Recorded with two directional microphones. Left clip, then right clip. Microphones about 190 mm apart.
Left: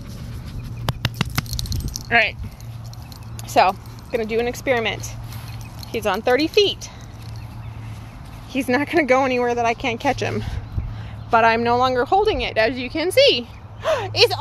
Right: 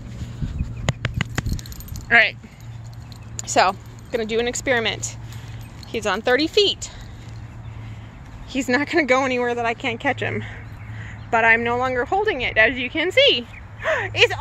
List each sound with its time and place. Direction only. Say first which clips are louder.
1.5 s keys jangling: left 7 dB; 25° right (ahead or behind)
2.0 s speech: right 2 dB; 10° right (ahead or behind)
3.3 s speech: left 1 dB; 5° right (ahead or behind)
8.5 s speech: even; 5° right (ahead or behind)
11.2 s a woman's voice: left 1 dB; 20° left (ahead or behind)